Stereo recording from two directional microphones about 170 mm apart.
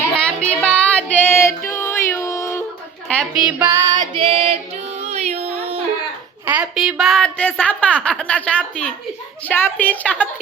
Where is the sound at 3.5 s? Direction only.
15° right (ahead or behind); by 5.8 s 40° right (ahead or behind).